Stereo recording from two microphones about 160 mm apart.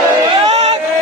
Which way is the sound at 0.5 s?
45° right (ahead or behind).